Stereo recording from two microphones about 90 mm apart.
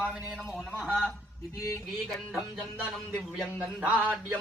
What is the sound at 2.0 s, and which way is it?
Speech, centre (ahead or behind).